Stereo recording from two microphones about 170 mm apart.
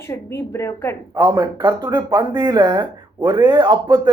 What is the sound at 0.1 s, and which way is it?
Speech, 15° left (ahead or behind).